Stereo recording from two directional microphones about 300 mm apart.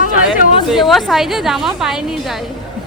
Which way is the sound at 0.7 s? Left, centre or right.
Centre.